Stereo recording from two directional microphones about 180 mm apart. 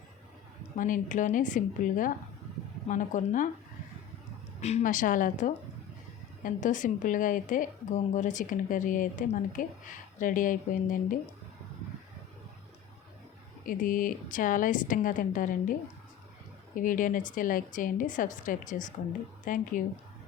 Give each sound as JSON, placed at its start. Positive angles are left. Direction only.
{"t": 0.8, "sound": "speech", "side_deg": 45}
{"t": 4.6, "sound": "speech", "side_deg": 40}
{"t": 13.7, "sound": "speech", "side_deg": 50}
{"t": 16.7, "sound": "speech", "side_deg": 50}